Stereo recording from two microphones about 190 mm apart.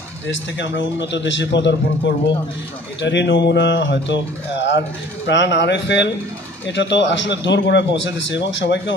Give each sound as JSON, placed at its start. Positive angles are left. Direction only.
{"t": 0.3, "sound": "speech", "side_deg": 75}